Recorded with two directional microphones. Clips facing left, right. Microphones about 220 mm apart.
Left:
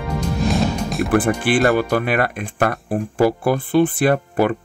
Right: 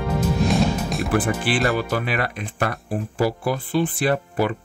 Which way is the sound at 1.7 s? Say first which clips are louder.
Left 5 dB; 55° left (ahead or behind).